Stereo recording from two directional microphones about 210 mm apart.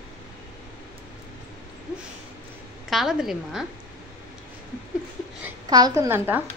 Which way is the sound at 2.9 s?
Centre (ahead or behind).